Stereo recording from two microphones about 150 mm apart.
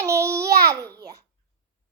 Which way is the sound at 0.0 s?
20° right (ahead or behind).